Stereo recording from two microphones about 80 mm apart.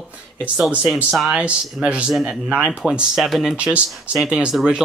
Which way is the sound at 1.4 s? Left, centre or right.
Centre.